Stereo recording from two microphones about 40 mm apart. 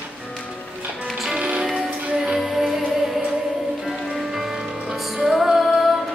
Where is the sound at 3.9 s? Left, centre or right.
Centre.